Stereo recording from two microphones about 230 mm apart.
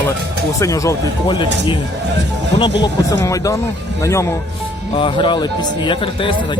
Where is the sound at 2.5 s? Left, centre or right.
Centre.